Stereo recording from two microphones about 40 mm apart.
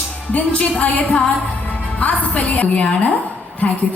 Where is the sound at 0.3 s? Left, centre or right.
Left.